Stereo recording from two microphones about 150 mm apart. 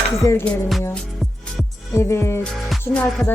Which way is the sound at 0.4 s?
Centre (ahead or behind).